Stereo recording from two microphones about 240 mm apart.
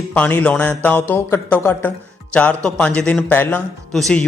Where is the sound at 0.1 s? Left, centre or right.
Centre.